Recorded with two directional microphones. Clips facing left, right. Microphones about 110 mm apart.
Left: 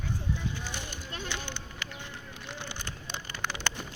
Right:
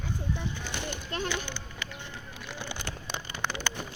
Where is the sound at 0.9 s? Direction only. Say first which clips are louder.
Right 6 dB; 70° right (ahead or behind).